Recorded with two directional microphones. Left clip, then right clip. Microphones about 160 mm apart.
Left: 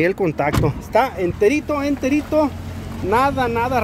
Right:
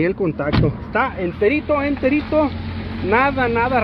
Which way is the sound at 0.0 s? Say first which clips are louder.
Left 2 dB; 60° left (ahead or behind).